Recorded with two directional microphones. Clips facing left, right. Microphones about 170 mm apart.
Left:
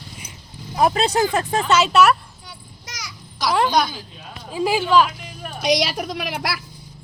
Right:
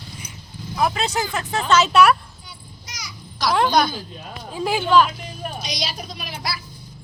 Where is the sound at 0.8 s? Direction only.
35° left (ahead or behind).